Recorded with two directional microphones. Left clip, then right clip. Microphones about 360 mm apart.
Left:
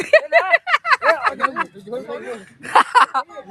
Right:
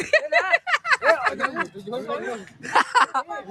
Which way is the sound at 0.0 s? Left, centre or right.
Centre.